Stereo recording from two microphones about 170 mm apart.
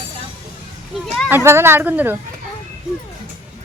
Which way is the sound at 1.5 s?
15° right (ahead or behind).